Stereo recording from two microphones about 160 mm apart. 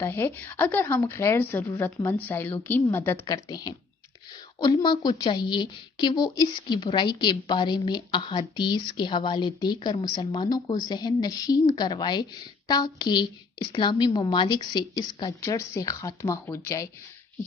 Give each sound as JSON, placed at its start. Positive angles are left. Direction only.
{"t": 0.0, "sound": "speech", "side_deg": 15}
{"t": 3.4, "sound": "a woman's voice", "side_deg": 25}